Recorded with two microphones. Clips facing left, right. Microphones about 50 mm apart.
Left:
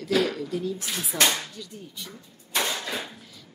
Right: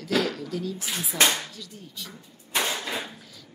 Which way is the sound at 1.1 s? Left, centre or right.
Right.